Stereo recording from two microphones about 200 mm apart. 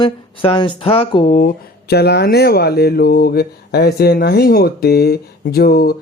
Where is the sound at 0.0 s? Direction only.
25° left (ahead or behind).